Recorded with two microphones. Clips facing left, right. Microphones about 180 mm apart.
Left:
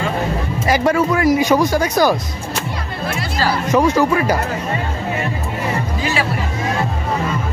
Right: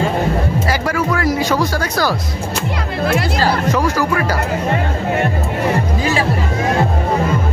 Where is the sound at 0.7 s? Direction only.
20° left (ahead or behind).